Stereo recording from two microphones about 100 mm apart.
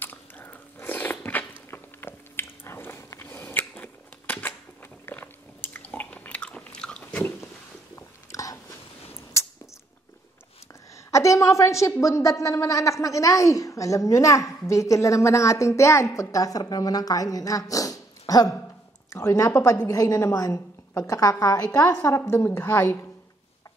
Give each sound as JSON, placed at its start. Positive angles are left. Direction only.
{"t": 0.0, "sound": "biting", "side_deg": 20}
{"t": 5.9, "sound": "a sound", "side_deg": 10}
{"t": 7.9, "sound": "biting", "side_deg": 30}
{"t": 11.1, "sound": "a woman's voice", "side_deg": 30}